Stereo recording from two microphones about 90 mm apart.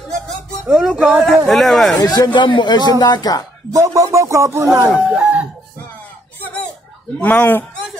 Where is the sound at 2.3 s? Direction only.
65° left (ahead or behind); by 3.5 s 50° left (ahead or behind).